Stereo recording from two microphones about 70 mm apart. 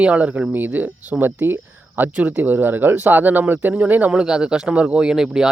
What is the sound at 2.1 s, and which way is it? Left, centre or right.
Speech, centre.